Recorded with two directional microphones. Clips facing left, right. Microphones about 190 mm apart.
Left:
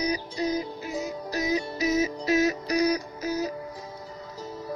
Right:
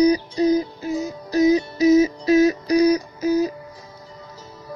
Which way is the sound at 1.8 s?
35° right (ahead or behind).